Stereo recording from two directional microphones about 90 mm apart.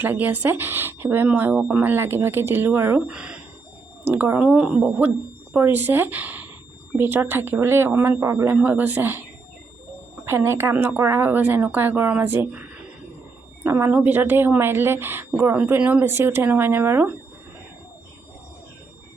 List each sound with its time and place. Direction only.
0.0 s a woman's voice: 20° right (ahead or behind)
3.1 s speech: 10° right (ahead or behind)
4.0 s a woman's voice: 25° right (ahead or behind)
4.4 s a woman's voice: 10° right (ahead or behind); by 8.5 s 35° right (ahead or behind)
8.6 s a woman's voice: 20° right (ahead or behind)
10.2 s a woman's voice: 30° right (ahead or behind)
13.7 s a man's voice: 30° right (ahead or behind)
13.9 s a woman's voice: 20° right (ahead or behind)